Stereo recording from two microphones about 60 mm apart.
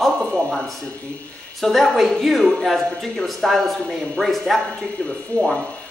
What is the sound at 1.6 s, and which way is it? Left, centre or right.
A man's voice, centre.